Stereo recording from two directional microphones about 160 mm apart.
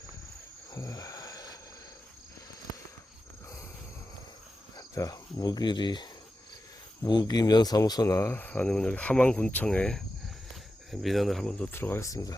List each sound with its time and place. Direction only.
0.7 s cricket: 20° left (ahead or behind)
4.8 s cricket: 20° left (ahead or behind)
7.0 s speech: 25° left (ahead or behind)